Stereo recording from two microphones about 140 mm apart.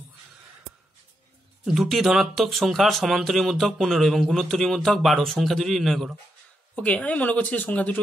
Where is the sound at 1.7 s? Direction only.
Centre (ahead or behind).